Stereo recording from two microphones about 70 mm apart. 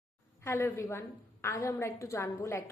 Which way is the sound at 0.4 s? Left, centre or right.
Left.